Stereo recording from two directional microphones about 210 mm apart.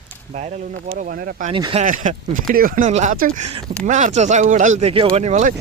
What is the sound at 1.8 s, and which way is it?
Speech, 40° right (ahead or behind).